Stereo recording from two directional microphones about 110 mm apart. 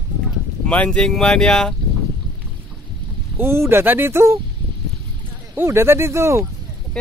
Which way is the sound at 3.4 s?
20° right (ahead or behind).